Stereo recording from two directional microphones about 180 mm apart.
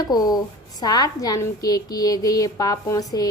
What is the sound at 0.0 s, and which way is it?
A woman's voice, 20° left (ahead or behind).